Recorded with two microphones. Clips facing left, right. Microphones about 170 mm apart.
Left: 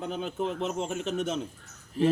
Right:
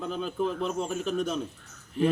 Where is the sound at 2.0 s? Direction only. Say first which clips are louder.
Left 1 dB; 40° left (ahead or behind).